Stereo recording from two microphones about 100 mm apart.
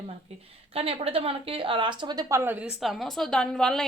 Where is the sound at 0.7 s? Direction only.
75° right (ahead or behind); by 2.3 s 45° right (ahead or behind).